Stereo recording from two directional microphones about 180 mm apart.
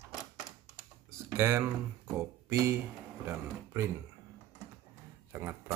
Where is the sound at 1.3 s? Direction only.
15° right (ahead or behind).